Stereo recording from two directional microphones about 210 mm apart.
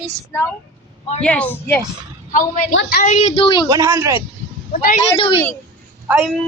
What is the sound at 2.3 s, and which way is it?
Speech, 40° left (ahead or behind).